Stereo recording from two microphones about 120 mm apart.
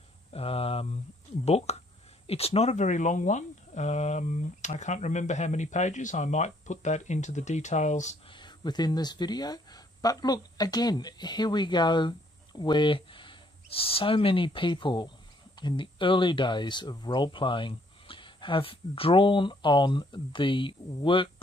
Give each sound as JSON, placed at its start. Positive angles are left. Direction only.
{"t": 0.3, "sound": "hum", "side_deg": 55}
{"t": 1.4, "sound": "speech", "side_deg": 60}
{"t": 8.3, "sound": "speech", "side_deg": 40}